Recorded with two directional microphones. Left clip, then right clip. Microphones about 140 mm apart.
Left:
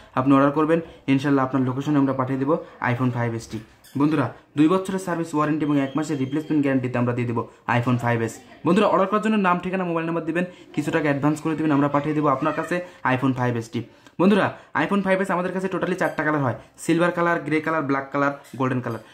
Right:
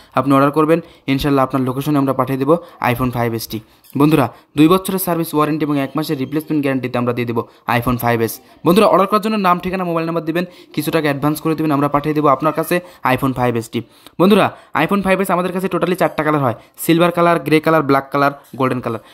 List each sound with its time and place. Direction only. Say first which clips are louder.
0.3 s a man's voice: right 5 dB; 30° right (ahead or behind)
4.0 s speech: right 8 dB; 50° right (ahead or behind)
9.2 s a man's voice: right 6 dB; 25° right (ahead or behind)